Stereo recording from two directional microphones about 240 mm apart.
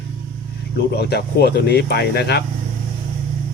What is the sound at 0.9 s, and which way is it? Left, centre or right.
Speech, left.